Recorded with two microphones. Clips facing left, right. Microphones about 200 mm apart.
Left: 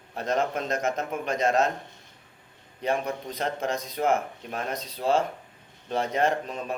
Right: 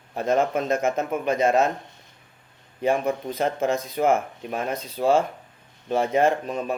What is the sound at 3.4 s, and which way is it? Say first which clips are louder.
Speech: right 5 dB; 50° right (ahead or behind).